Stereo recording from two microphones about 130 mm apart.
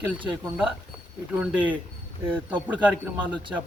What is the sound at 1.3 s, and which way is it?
Speech, 10° right (ahead or behind).